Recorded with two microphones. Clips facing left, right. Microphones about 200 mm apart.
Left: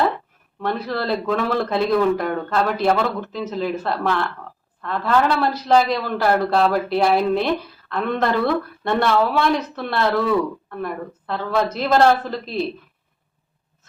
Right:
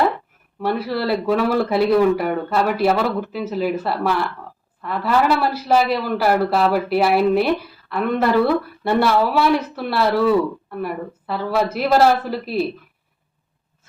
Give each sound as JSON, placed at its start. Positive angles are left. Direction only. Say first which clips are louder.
{"t": 0.6, "sound": "a man's voice", "louder": "right 2 dB", "side_deg": -10}